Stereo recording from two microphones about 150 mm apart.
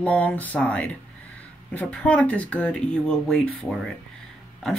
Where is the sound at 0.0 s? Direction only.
10° left (ahead or behind).